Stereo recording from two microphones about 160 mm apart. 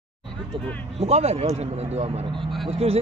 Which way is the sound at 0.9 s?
40° right (ahead or behind).